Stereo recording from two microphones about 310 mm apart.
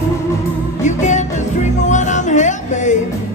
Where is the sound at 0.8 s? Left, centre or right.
Left.